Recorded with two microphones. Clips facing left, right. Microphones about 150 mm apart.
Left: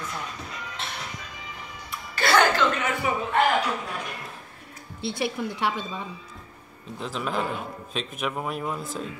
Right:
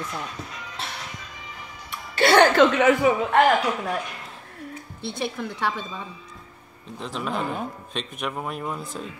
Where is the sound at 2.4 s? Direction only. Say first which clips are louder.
Right 5 dB; 75° right (ahead or behind).